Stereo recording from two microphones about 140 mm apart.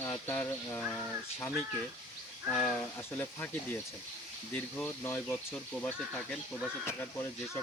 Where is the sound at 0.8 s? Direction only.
5° left (ahead or behind).